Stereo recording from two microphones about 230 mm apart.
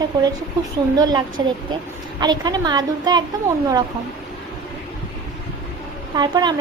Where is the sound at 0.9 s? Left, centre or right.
Centre.